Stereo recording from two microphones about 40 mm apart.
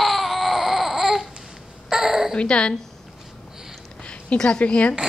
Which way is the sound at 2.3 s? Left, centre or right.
Left.